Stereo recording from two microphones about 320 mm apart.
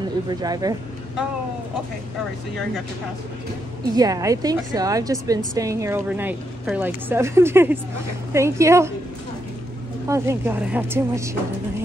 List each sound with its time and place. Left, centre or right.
0.3 s a woman's voice: centre
3.9 s a woman's voice: centre
10.0 s a woman's voice: centre